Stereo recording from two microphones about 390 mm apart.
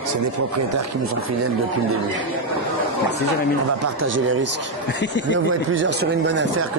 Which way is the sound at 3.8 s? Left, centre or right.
Right.